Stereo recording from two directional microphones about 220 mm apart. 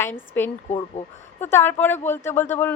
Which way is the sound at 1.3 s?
10° left (ahead or behind).